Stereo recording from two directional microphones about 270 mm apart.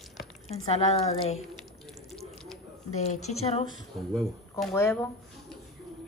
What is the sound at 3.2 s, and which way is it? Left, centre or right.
Speech, left.